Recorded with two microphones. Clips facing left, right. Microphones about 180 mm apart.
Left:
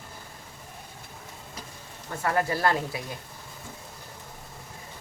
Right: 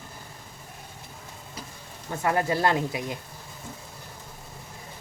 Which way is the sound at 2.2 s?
20° right (ahead or behind).